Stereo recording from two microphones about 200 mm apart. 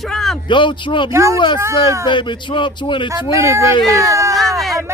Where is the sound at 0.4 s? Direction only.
25° left (ahead or behind).